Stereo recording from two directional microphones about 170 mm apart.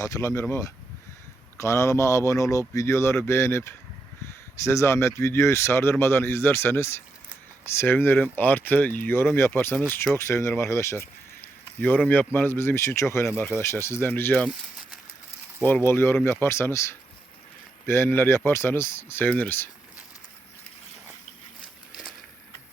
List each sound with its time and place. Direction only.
0.0 s speech: 20° left (ahead or behind)